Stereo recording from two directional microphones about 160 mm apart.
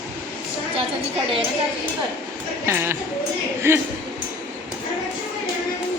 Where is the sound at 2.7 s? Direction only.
15° right (ahead or behind).